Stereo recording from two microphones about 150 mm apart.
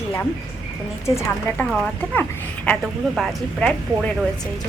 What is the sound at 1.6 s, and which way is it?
Speech, 5° left (ahead or behind).